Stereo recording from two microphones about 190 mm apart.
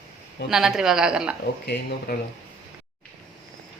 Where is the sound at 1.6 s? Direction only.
55° left (ahead or behind).